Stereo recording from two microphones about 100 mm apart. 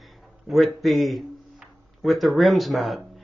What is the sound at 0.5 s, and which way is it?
Speech, centre (ahead or behind).